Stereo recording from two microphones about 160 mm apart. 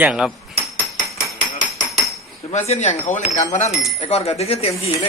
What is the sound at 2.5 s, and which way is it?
Speech, 45° left (ahead or behind).